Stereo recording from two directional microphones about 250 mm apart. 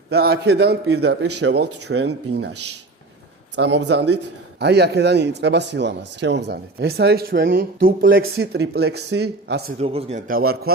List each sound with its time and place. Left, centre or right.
0.1 s speech: right
3.5 s speech: right
9.7 s speech: right